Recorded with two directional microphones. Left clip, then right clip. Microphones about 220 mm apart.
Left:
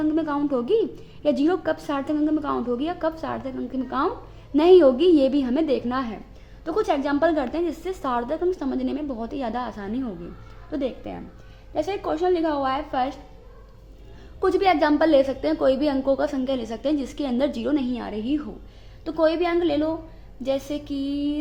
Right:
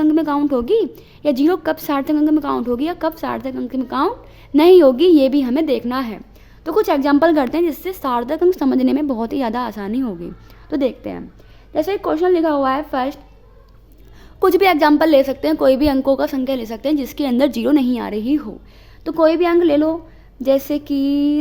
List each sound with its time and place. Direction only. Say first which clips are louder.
0.0 s a woman's voice: right 7 dB; 35° right (ahead or behind)
6.7 s a woman's voice: right 7 dB; 50° right (ahead or behind)
14.3 s a woman's voice: right 6 dB; 50° right (ahead or behind)